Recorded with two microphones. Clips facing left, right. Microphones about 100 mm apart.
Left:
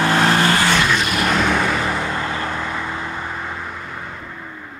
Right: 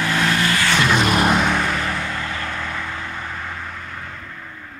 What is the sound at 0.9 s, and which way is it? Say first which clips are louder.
Vehicle: right 3 dB; 30° right (ahead or behind).